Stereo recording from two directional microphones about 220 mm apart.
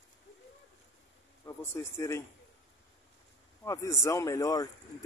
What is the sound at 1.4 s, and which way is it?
Speech, 10° left (ahead or behind).